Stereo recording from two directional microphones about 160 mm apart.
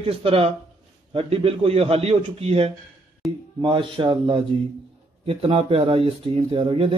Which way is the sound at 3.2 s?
Centre (ahead or behind).